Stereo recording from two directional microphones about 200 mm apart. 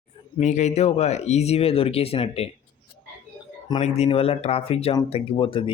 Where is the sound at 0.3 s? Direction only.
35° left (ahead or behind).